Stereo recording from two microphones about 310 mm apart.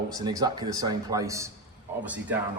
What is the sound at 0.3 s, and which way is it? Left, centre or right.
A man's voice, centre.